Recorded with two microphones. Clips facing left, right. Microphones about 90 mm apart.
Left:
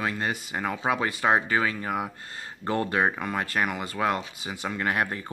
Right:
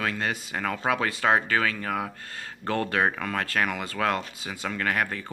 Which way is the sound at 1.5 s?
15° left (ahead or behind).